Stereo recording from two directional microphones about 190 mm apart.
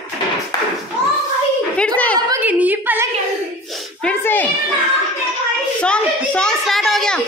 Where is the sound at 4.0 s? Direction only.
10° left (ahead or behind).